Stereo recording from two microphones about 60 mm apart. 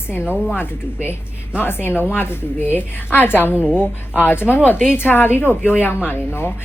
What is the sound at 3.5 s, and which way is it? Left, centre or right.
Speech, centre.